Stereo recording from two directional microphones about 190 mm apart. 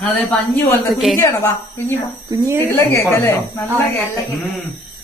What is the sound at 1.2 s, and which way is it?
A woman's voice, 15° left (ahead or behind).